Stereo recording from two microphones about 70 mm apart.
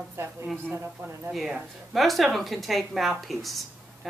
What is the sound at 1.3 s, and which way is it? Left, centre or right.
A woman's voice, centre.